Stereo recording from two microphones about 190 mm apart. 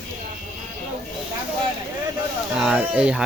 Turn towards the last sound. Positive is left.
turn(degrees=-5)  # may be behind; listen again after turning